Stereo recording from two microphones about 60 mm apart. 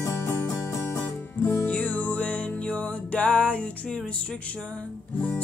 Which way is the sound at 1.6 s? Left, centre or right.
Left.